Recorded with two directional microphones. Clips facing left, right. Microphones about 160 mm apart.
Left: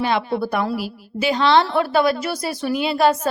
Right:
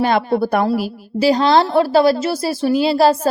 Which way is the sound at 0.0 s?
45° right (ahead or behind).